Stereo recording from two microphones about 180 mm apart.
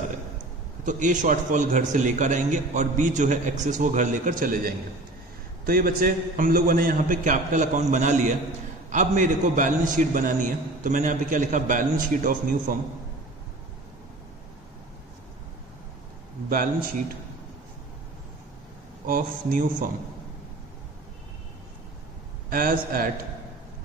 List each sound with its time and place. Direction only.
0.8 s a man's voice: 45° right (ahead or behind)
19.0 s a man's voice: 50° right (ahead or behind)
22.5 s a man's voice: 55° right (ahead or behind)